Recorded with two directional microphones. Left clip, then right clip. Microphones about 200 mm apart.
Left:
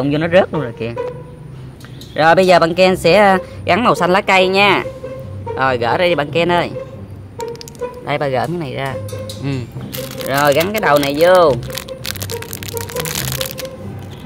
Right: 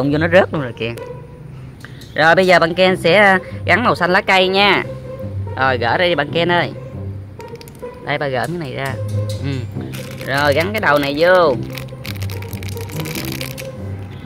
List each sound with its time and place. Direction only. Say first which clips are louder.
0.0 s speech: even; 10° right (ahead or behind)
2.1 s speech: left 1 dB; centre (ahead or behind)
8.0 s speech: left 1 dB; 5° left (ahead or behind)
11.6 s music: left 4 dB; 20° left (ahead or behind)